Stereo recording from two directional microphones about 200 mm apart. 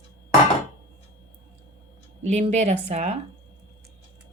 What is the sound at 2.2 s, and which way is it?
Speech, 35° right (ahead or behind).